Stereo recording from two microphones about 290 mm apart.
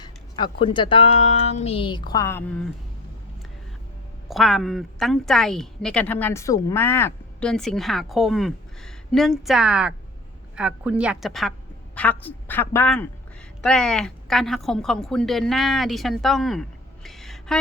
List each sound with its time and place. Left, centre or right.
0.0 s speech: centre
4.3 s a woman's voice: centre